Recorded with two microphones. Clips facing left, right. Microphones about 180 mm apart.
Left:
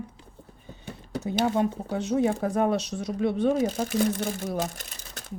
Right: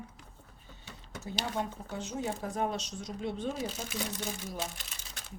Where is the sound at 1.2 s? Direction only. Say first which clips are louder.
Left 11 dB; 65° left (ahead or behind).